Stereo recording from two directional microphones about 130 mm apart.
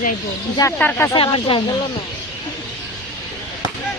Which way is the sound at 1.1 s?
40° left (ahead or behind).